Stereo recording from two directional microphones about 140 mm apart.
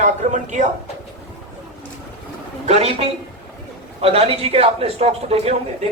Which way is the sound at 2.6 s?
50° right (ahead or behind).